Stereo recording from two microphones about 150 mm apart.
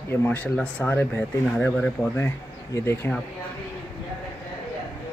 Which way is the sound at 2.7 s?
15° left (ahead or behind).